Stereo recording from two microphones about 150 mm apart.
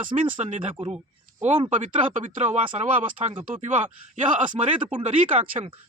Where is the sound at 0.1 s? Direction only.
40° right (ahead or behind).